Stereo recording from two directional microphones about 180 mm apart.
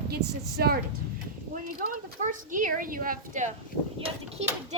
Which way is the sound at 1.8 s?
50° right (ahead or behind).